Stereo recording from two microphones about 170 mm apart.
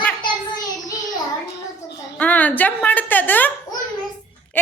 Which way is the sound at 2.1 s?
10° left (ahead or behind).